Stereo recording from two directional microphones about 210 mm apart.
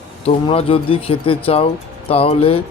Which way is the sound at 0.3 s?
25° left (ahead or behind).